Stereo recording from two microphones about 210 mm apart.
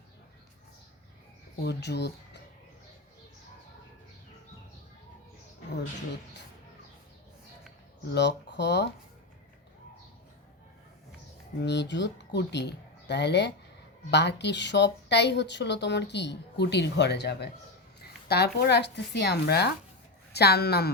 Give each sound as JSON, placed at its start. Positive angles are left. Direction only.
{"t": 1.6, "sound": "speech", "side_deg": 55}
{"t": 8.1, "sound": "speech", "side_deg": 55}
{"t": 11.6, "sound": "speech", "side_deg": 55}